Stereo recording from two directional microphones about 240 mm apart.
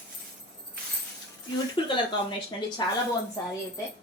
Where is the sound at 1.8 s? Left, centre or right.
Left.